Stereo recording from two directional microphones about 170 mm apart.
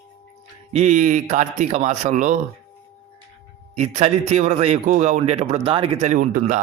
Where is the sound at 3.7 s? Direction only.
40° right (ahead or behind).